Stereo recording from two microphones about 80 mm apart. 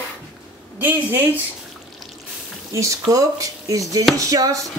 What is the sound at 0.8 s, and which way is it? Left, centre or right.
Speech, right.